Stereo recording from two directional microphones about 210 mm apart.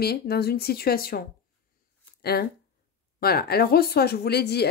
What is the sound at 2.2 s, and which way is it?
Speech, 50° left (ahead or behind).